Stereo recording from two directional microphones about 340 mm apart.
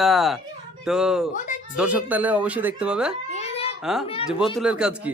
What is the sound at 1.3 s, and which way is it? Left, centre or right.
Speech, left.